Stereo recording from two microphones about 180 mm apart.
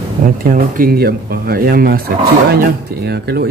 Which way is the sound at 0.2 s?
50° right (ahead or behind).